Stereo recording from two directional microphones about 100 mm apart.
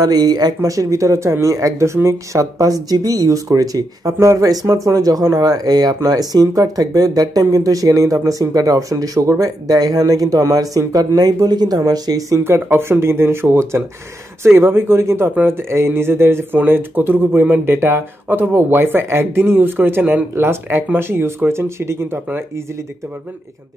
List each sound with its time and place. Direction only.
0.0 s speech: 40° right (ahead or behind)
12.4 s speech: 25° right (ahead or behind)